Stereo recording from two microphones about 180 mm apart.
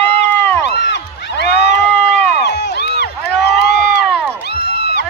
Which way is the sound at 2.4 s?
70° left (ahead or behind).